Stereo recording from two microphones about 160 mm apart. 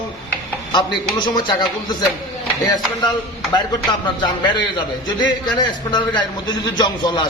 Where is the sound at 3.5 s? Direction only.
30° left (ahead or behind).